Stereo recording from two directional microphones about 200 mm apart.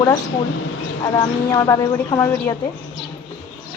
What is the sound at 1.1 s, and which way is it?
A woman's voice, 15° left (ahead or behind).